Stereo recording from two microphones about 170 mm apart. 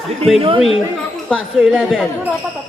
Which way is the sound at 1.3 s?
Centre (ahead or behind).